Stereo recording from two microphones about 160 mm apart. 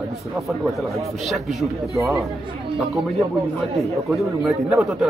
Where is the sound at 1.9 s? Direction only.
20° right (ahead or behind).